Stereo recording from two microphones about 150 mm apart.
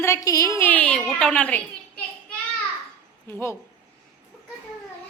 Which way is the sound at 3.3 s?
15° left (ahead or behind).